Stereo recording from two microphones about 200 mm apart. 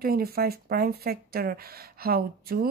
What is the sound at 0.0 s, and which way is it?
Speech, 50° right (ahead or behind).